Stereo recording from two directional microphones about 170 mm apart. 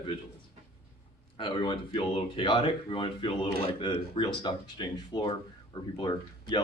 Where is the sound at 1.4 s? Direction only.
30° left (ahead or behind).